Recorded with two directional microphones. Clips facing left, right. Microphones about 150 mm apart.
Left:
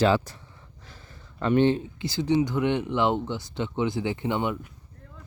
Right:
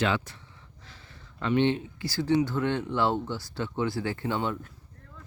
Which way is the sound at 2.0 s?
20° left (ahead or behind).